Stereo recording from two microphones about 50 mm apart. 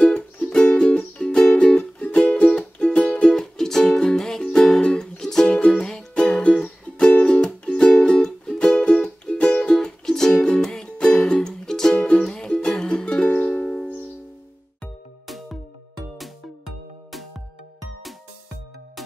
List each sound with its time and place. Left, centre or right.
0.4 s music: centre
3.3 s music: centre
5.6 s music: left
5.9 s music: centre
11.9 s music: left
15.2 s music: centre